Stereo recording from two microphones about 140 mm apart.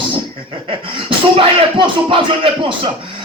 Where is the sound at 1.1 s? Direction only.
35° right (ahead or behind).